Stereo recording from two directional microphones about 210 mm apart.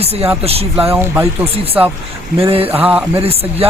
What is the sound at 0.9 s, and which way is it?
Speech, 10° right (ahead or behind).